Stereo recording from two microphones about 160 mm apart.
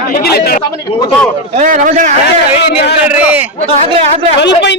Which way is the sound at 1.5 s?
50° right (ahead or behind).